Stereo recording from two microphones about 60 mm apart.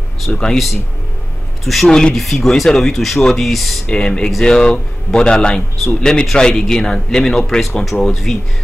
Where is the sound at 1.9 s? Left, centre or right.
Centre.